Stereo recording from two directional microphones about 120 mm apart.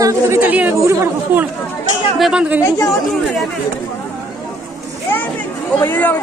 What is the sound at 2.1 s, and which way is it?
Speech, 5° right (ahead or behind).